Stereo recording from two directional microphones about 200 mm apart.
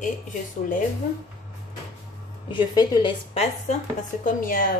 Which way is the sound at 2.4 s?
20° left (ahead or behind).